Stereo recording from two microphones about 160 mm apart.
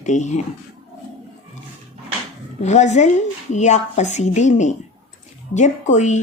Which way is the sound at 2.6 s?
45° left (ahead or behind).